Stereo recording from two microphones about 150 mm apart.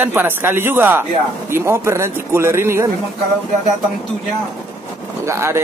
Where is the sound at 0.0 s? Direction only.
15° right (ahead or behind).